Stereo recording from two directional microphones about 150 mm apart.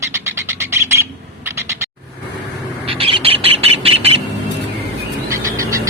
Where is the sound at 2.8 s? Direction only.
40° right (ahead or behind).